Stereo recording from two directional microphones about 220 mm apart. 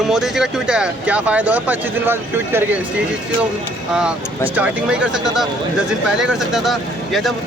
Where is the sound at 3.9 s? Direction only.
5° right (ahead or behind).